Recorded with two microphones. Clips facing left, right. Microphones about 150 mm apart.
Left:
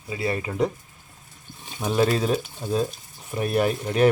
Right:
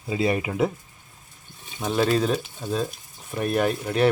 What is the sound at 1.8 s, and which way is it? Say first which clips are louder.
Speech: even; 5° left (ahead or behind).